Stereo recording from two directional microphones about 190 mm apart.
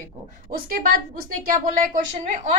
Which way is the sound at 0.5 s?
50° right (ahead or behind).